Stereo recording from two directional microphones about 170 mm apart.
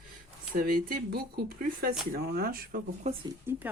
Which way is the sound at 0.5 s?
55° right (ahead or behind).